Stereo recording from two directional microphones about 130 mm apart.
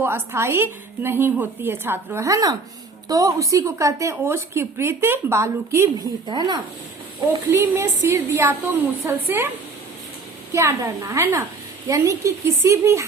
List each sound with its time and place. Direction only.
0.0 s a woman's voice: 20° right (ahead or behind)
6.2 s speech: 35° right (ahead or behind)
7.5 s a woman's voice: 20° right (ahead or behind)
10.5 s a woman's voice: 20° right (ahead or behind)